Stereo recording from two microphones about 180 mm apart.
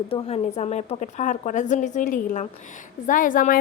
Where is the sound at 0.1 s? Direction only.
35° left (ahead or behind).